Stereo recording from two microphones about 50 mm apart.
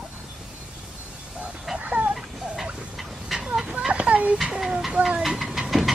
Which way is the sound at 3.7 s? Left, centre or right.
Centre.